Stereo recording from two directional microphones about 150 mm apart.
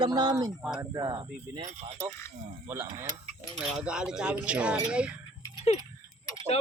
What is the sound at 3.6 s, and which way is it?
Speech, 5° right (ahead or behind).